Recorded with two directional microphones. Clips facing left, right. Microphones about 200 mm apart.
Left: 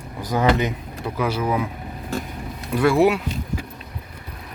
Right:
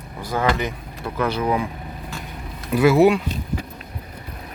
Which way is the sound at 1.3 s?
5° left (ahead or behind).